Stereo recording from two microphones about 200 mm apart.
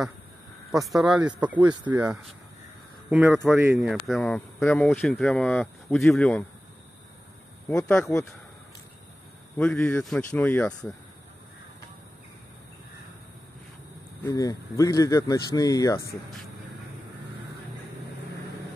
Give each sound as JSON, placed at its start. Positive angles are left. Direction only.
{"t": 0.8, "sound": "speech", "side_deg": 0}
{"t": 1.9, "sound": "speech", "side_deg": -15}
{"t": 3.1, "sound": "speech", "side_deg": -5}
{"t": 7.6, "sound": "speech", "side_deg": 10}
{"t": 9.6, "sound": "speech", "side_deg": 5}
{"t": 14.2, "sound": "speech", "side_deg": 15}